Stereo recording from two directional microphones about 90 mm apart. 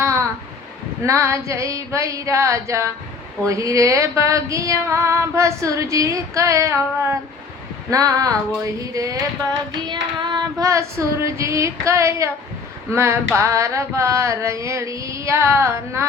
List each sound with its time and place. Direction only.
0.0 s a sound: 30° right (ahead or behind)
1.0 s female singing: 35° right (ahead or behind)
9.5 s child singing: 55° right (ahead or behind)
10.6 s female singing: 35° right (ahead or behind)